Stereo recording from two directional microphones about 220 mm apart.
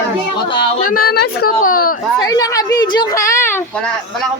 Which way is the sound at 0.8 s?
40° left (ahead or behind).